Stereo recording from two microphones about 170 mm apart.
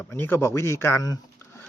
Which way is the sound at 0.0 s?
15° left (ahead or behind).